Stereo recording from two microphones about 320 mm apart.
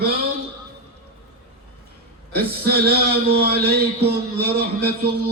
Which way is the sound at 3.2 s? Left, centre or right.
Right.